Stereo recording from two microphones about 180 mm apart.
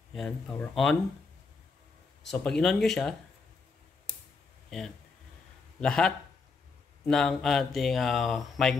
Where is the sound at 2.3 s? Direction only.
5° left (ahead or behind).